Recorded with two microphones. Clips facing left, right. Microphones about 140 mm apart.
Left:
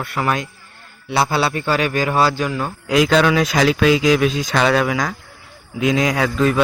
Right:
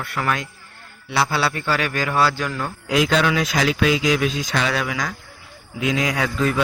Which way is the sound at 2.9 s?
45° left (ahead or behind).